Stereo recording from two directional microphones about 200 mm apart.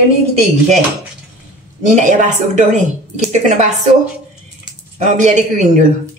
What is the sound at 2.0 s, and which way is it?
A woman's voice, 35° right (ahead or behind).